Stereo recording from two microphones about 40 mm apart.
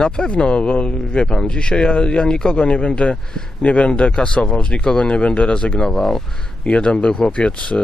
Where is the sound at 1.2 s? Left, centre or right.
Centre.